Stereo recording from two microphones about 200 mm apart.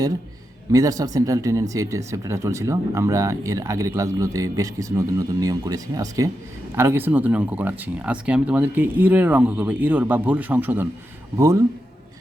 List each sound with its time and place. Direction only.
0.7 s speech: 15° right (ahead or behind)